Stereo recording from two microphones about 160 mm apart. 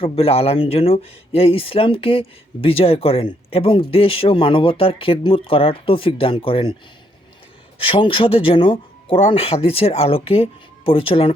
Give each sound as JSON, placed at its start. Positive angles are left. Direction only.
{"t": 0.0, "sound": "speech", "side_deg": 40}
{"t": 7.8, "sound": "speech", "side_deg": 35}